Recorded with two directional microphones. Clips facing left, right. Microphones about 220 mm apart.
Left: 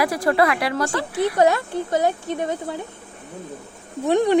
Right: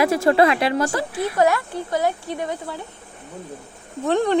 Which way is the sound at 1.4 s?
20° left (ahead or behind).